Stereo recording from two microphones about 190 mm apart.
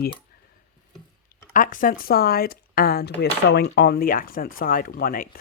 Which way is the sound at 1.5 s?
45° left (ahead or behind).